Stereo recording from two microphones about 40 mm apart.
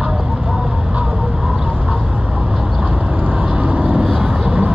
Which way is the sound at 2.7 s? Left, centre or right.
Right.